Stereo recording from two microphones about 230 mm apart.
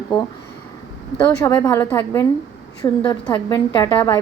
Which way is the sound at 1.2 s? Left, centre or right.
Centre.